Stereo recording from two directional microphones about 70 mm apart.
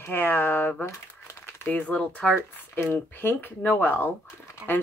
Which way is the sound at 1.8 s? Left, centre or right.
Centre.